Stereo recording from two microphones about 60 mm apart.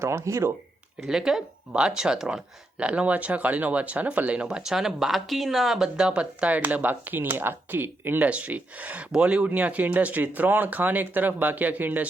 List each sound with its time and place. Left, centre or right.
0.0 s speech: right
1.0 s speech: centre
6.0 s speech: centre